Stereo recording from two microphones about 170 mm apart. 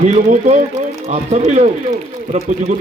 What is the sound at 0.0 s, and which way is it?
A man's voice, 45° right (ahead or behind).